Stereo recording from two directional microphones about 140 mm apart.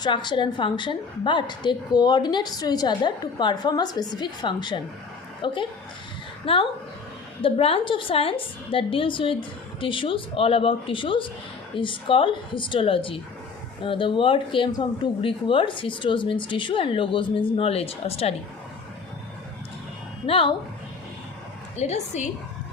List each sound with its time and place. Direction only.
0.0 s a woman's voice: 35° left (ahead or behind)
20.2 s a woman's voice: 40° left (ahead or behind)
21.8 s speech: 55° left (ahead or behind)